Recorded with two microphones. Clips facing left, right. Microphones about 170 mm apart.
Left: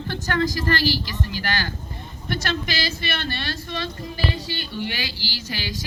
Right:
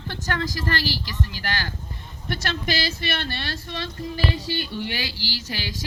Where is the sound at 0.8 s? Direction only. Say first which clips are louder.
Left 4 dB; 30° right (ahead or behind).